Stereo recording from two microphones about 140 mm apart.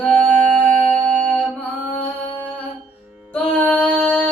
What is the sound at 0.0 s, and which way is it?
Music, 10° left (ahead or behind).